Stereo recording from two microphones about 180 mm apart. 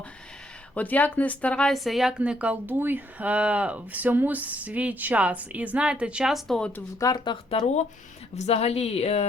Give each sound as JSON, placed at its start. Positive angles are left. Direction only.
{"t": 0.7, "sound": "speech", "side_deg": 10}
{"t": 7.0, "sound": "speech", "side_deg": 20}
{"t": 8.4, "sound": "a woman's voice", "side_deg": 35}